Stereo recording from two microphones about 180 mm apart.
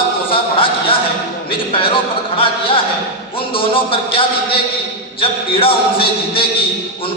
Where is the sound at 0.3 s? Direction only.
30° left (ahead or behind).